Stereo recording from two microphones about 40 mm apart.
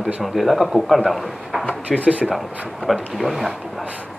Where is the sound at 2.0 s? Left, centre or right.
Right.